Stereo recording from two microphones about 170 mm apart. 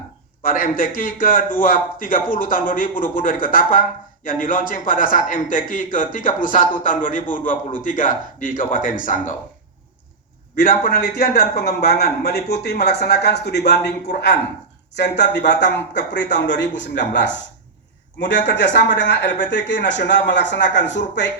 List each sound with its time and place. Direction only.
0.4 s a man's voice: 55° left (ahead or behind)
10.5 s a man's voice: 60° left (ahead or behind); by 21.0 s 90° left